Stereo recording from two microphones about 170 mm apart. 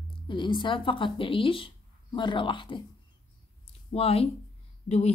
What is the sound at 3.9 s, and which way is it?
A woman's voice, 35° left (ahead or behind).